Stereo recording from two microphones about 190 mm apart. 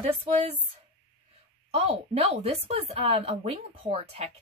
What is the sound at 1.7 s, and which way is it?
A woman's voice, 30° right (ahead or behind).